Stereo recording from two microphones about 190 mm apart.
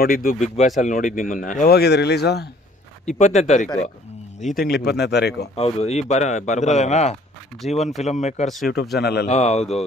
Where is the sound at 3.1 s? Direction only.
40° left (ahead or behind).